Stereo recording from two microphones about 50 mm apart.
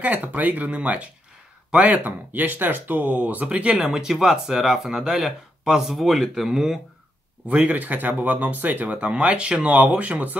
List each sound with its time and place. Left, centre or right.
0.0 s speech: right
3.4 s speech: right
3.8 s speech: centre
7.4 s speech: right
8.9 s speech: right